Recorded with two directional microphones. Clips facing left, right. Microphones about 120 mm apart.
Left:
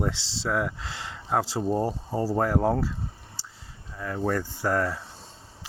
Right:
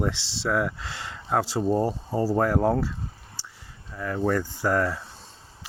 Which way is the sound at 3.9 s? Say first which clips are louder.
Right 2 dB; 25° left (ahead or behind).